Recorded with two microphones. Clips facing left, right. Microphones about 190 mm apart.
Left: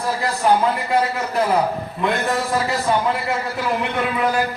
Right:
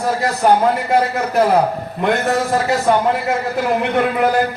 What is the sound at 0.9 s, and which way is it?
Speech, 60° right (ahead or behind).